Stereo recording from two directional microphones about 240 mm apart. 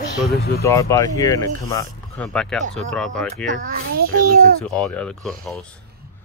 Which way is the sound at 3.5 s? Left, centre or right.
Right.